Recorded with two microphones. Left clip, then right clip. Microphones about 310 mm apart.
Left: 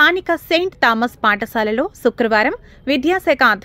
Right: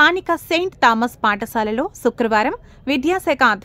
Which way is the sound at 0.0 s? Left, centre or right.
Centre.